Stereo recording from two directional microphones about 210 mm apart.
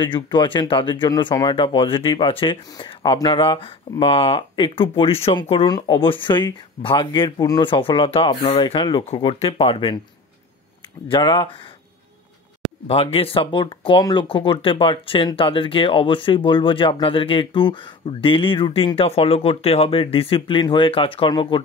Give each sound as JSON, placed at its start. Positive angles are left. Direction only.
{"t": 0.0, "sound": "speech", "side_deg": 20}
{"t": 11.1, "sound": "speech", "side_deg": 25}
{"t": 12.8, "sound": "speech", "side_deg": 25}